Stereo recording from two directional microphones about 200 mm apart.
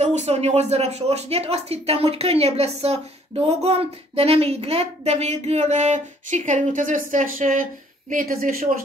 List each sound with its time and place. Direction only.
0.0 s a woman's voice: 35° right (ahead or behind)